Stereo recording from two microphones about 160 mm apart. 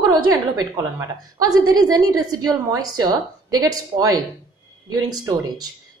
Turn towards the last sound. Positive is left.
turn(degrees=-25)  # may be behind; listen again after turning